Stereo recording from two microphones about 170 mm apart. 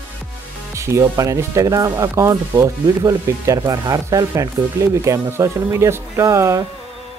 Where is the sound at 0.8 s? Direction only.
15° right (ahead or behind).